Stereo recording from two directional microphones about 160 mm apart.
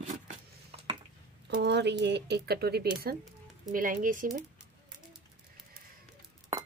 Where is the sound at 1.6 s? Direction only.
90° right.